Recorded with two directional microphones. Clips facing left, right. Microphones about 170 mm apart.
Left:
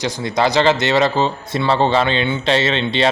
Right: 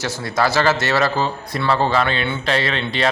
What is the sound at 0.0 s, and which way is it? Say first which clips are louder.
A man's voice: left 2 dB; 20° left (ahead or behind).